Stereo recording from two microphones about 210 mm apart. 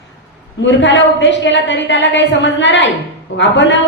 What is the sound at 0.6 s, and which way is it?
A woman's voice, 60° left (ahead or behind).